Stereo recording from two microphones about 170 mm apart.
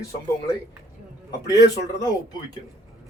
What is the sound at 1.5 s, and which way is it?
Speech, 20° left (ahead or behind).